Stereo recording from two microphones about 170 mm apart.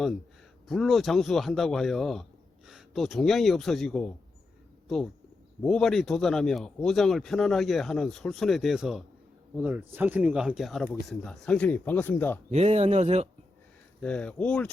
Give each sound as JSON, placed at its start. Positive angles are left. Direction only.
{"t": 0.7, "sound": "speech", "side_deg": 0}
{"t": 5.6, "sound": "speech", "side_deg": 0}
{"t": 12.5, "sound": "speech", "side_deg": -40}
{"t": 14.0, "sound": "speech", "side_deg": 5}